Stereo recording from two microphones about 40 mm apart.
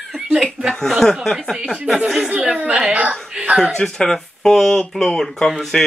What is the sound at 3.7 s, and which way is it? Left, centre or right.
Speech, centre.